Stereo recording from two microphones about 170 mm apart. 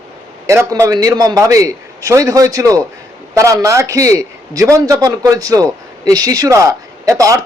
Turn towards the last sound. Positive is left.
turn(degrees=-20)  # may be behind; listen again after turning